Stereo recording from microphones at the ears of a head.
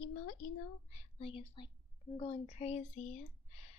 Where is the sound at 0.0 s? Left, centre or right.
Left.